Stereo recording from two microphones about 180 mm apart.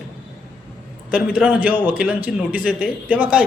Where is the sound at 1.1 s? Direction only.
5° right (ahead or behind).